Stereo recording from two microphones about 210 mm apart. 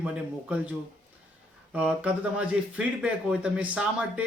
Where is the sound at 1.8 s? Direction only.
5° right (ahead or behind).